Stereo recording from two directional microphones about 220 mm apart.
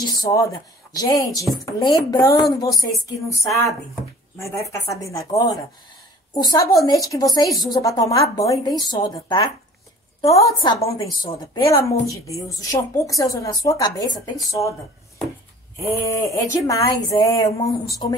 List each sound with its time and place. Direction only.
0.0 s a woman's voice: 15° left (ahead or behind)
15.8 s a woman's voice: 15° left (ahead or behind)